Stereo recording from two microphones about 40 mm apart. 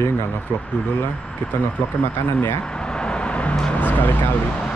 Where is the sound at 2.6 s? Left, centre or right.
Left.